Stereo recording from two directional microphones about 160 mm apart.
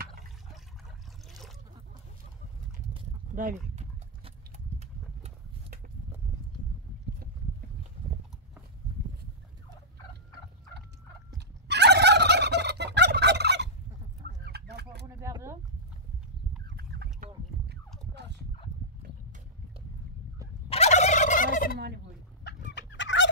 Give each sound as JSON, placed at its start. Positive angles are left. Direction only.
{"t": 3.3, "sound": "speech", "side_deg": -55}
{"t": 11.3, "sound": "fowl", "side_deg": -90}
{"t": 14.2, "sound": "a sound", "side_deg": -85}
{"t": 15.1, "sound": "a sound", "side_deg": -15}
{"t": 16.6, "sound": "chicken", "side_deg": -90}
{"t": 20.7, "sound": "fowl", "side_deg": 40}